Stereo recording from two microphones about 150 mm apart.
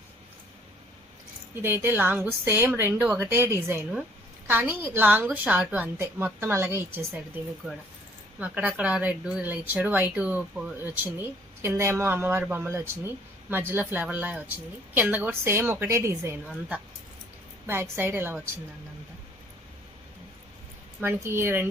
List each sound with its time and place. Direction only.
1.6 s speech: 15° right (ahead or behind)
8.4 s speech: 10° right (ahead or behind)
17.7 s speech: 15° right (ahead or behind)
21.2 s speech: 15° right (ahead or behind)